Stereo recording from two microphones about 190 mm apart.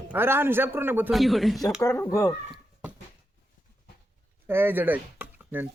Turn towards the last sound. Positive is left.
turn(degrees=-10)  # may be behind; listen again after turning